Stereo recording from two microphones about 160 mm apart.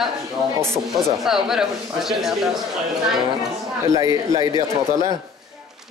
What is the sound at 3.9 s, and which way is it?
A man's voice, 20° right (ahead or behind).